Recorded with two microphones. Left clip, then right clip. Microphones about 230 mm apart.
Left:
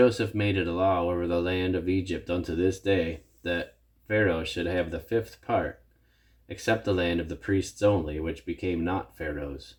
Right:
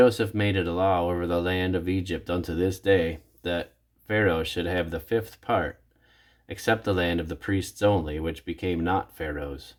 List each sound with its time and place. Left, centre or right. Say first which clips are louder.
0.0 s speech: right 2 dB; right